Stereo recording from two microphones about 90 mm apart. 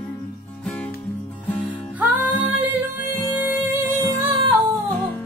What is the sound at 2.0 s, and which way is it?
Music, 20° right (ahead or behind).